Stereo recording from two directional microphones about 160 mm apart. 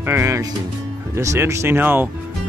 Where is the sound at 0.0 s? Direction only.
15° right (ahead or behind).